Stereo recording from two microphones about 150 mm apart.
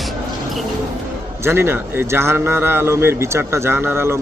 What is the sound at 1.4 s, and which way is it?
A man's voice, 15° right (ahead or behind).